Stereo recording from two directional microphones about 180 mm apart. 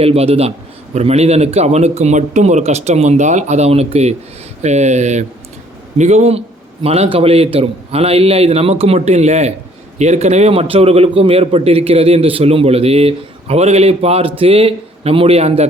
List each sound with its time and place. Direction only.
0.0 s a man's voice: 35° right (ahead or behind)